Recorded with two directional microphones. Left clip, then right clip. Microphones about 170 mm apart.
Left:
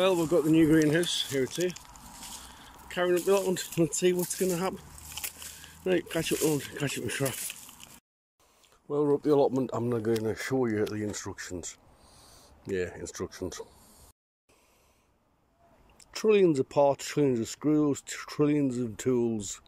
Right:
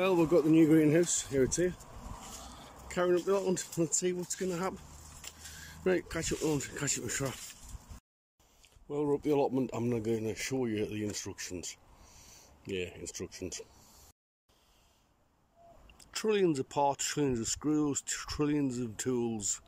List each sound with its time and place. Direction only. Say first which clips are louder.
0.0 s speech: left 2 dB; 10° right (ahead or behind)
2.6 s a sound: left 2 dB; 10° right (ahead or behind)
3.3 s speech: left 5 dB; centre (ahead or behind)
5.9 s speech: left 4 dB; centre (ahead or behind)
8.8 s speech: left 5 dB; 10° right (ahead or behind)
12.2 s a sound: left 1 dB; 15° right (ahead or behind)
12.6 s speech: left 6 dB; 20° right (ahead or behind)
13.0 s speech: left 5 dB; 10° right (ahead or behind)
16.0 s speech: left 7 dB; 5° right (ahead or behind)